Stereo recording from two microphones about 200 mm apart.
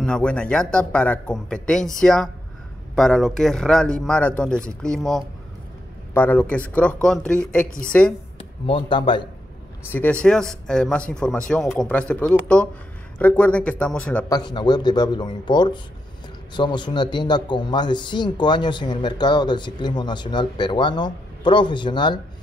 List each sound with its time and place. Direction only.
0.0 s speech: 5° left (ahead or behind)
8.4 s speech: 25° left (ahead or behind)
9.8 s speech: 10° left (ahead or behind)
14.3 s a man's voice: 20° left (ahead or behind)